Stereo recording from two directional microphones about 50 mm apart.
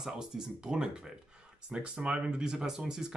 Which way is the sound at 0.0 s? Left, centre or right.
Centre.